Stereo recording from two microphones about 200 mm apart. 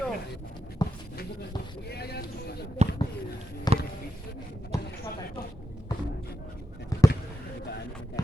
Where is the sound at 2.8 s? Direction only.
35° right (ahead or behind).